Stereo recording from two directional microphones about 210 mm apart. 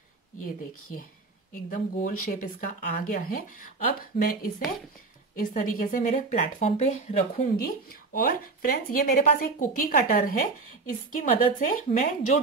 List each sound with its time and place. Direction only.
1.5 s speech: 40° left (ahead or behind)
7.6 s speech: 40° left (ahead or behind)